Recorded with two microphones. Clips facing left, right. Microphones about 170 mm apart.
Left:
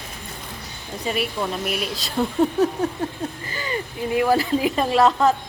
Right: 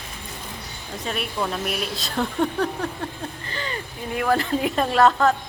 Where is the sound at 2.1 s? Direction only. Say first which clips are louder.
Left 4 dB; 15° left (ahead or behind).